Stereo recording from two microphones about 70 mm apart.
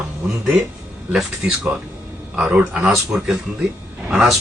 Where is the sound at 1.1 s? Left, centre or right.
Centre.